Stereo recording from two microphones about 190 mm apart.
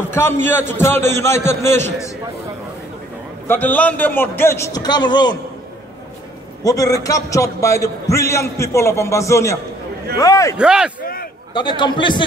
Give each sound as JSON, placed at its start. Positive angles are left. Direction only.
{"t": 0.1, "sound": "a man's voice", "side_deg": 10}
{"t": 3.4, "sound": "a man's voice", "side_deg": 10}
{"t": 6.6, "sound": "a man's voice", "side_deg": 20}
{"t": 10.6, "sound": "a man's voice", "side_deg": -5}
{"t": 11.5, "sound": "a man's voice", "side_deg": 25}